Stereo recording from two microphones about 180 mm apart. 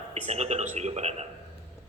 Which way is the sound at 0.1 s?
35° right (ahead or behind).